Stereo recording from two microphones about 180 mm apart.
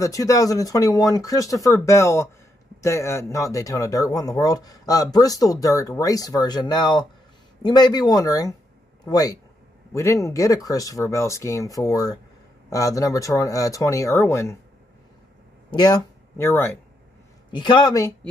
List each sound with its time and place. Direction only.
0.0 s speech: 20° left (ahead or behind)
15.7 s speech: 20° left (ahead or behind)
17.5 s speech: 25° left (ahead or behind)